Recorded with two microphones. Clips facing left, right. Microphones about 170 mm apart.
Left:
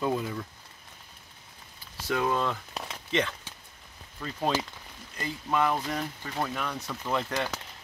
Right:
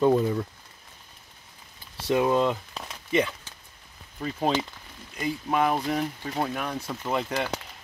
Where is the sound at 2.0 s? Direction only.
20° right (ahead or behind).